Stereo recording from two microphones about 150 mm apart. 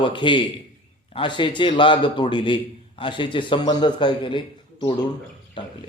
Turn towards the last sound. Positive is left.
turn(degrees=30)  # may be behind; listen again after turning